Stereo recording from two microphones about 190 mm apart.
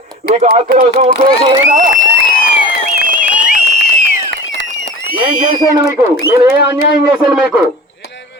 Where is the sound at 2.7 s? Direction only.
45° left (ahead or behind).